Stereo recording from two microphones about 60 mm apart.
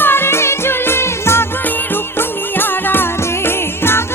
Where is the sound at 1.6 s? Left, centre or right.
Left.